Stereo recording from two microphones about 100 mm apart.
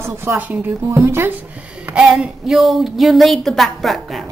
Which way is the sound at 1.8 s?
10° right (ahead or behind).